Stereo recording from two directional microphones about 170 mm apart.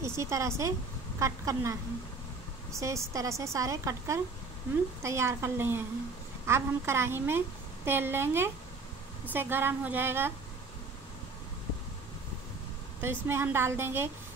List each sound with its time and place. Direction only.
0.0 s a woman's voice: 15° right (ahead or behind)
13.0 s a woman's voice: 15° right (ahead or behind)